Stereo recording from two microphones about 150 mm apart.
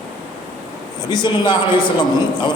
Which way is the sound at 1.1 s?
30° left (ahead or behind).